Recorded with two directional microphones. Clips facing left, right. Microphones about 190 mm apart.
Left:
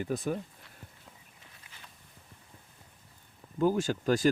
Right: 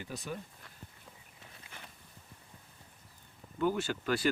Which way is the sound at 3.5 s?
35° left (ahead or behind).